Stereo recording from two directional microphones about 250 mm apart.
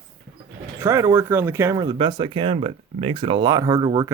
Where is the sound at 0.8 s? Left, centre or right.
Centre.